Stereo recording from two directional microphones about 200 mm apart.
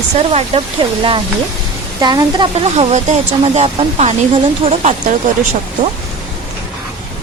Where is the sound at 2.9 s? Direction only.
35° right (ahead or behind).